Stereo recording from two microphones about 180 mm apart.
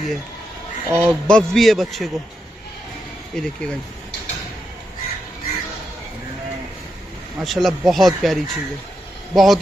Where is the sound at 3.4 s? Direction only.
5° left (ahead or behind).